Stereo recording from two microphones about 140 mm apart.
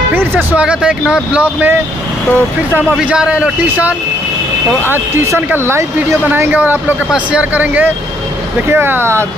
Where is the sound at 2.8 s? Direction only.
10° right (ahead or behind).